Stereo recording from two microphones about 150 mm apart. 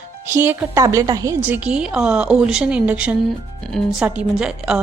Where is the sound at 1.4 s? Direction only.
10° right (ahead or behind).